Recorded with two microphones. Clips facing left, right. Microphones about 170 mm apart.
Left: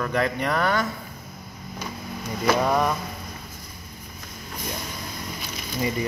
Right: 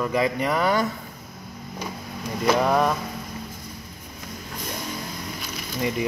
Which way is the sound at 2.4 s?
Centre (ahead or behind).